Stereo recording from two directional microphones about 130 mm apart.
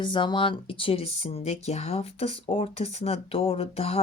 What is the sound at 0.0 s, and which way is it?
Speech, 40° left (ahead or behind).